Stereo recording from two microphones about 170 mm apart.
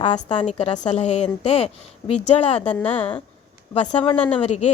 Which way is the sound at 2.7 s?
10° left (ahead or behind).